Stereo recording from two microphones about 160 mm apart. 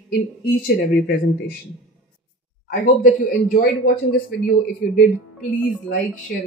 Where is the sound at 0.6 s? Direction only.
65° left (ahead or behind).